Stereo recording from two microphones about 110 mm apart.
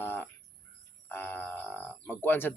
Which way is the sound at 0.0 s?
20° left (ahead or behind).